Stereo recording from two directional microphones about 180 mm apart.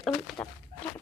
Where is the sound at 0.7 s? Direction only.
50° right (ahead or behind).